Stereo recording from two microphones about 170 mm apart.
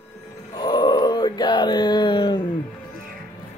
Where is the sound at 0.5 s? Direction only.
25° left (ahead or behind).